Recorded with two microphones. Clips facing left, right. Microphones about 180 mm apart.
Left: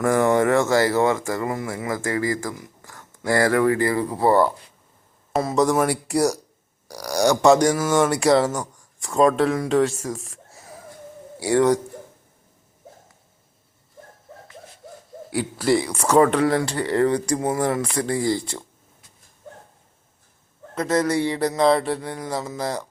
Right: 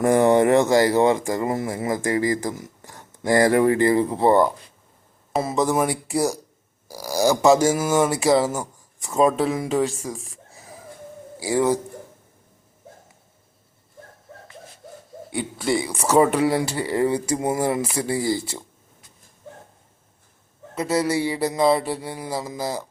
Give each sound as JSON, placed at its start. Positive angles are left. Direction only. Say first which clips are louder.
{"t": 0.0, "sound": "speech", "louder": "right 2 dB", "side_deg": -20}
{"t": 1.5, "sound": "speech", "louder": "right 2 dB", "side_deg": -30}
{"t": 1.8, "sound": "speech", "louder": "right 2 dB", "side_deg": -20}
{"t": 5.3, "sound": "speech", "louder": "left 2 dB", "side_deg": -5}
{"t": 15.3, "sound": "speech", "louder": "left 3 dB", "side_deg": 5}
{"t": 20.7, "sound": "speech", "louder": "left 1 dB", "side_deg": -10}